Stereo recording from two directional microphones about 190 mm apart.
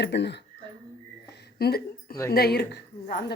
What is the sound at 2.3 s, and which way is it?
Speech, 55° left (ahead or behind).